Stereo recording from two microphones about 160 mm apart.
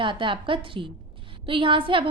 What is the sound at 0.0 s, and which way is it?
A woman's voice, 30° right (ahead or behind).